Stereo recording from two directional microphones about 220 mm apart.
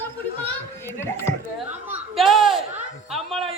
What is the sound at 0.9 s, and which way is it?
Speech, 10° left (ahead or behind).